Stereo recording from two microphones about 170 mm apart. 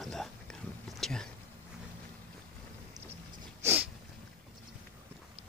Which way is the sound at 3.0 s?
20° right (ahead or behind).